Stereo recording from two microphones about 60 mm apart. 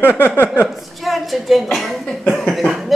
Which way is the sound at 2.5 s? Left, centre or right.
Centre.